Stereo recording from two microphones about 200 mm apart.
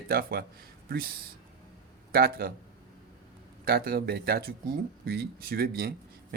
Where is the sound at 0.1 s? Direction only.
50° right (ahead or behind).